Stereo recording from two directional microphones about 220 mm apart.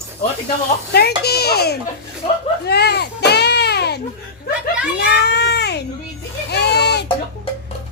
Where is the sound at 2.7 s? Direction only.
45° left (ahead or behind).